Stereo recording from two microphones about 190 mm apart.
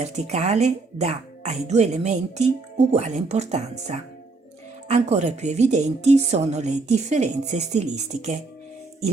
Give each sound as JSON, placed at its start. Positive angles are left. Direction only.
{"t": 0.0, "sound": "speech", "side_deg": -35}